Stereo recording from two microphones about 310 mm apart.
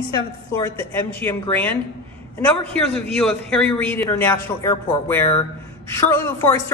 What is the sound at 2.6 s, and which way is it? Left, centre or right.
Speech, centre.